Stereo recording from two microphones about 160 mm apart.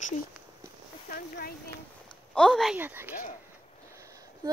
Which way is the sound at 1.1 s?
70° left (ahead or behind).